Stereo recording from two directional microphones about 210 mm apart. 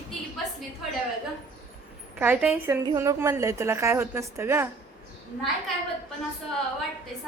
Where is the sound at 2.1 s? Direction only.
10° right (ahead or behind).